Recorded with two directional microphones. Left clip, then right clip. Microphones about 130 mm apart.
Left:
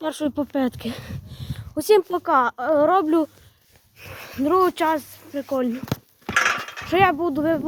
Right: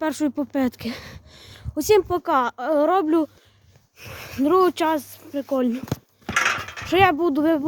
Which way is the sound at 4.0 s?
30° right (ahead or behind).